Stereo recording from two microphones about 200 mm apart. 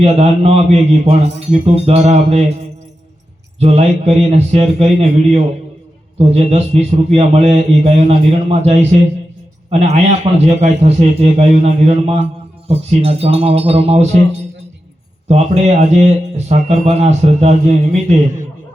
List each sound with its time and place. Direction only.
0.0 s a man's voice: 30° right (ahead or behind)
3.6 s a man's voice: 30° right (ahead or behind)
15.3 s a man's voice: 35° right (ahead or behind)